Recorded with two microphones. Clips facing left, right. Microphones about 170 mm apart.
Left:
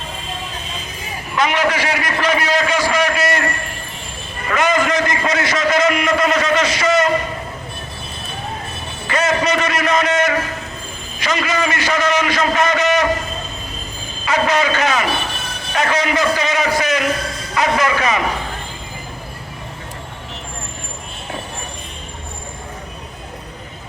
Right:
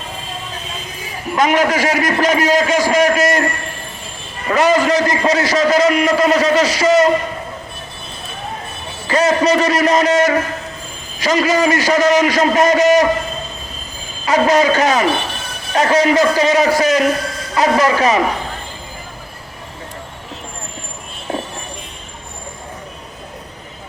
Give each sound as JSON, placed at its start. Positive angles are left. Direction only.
{"t": 1.4, "sound": "a man's voice", "side_deg": -45}
{"t": 4.4, "sound": "a man's voice", "side_deg": -35}
{"t": 9.0, "sound": "a man's voice", "side_deg": -35}
{"t": 14.3, "sound": "a man's voice", "side_deg": -40}